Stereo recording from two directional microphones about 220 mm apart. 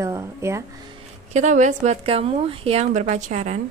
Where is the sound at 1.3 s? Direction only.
35° right (ahead or behind).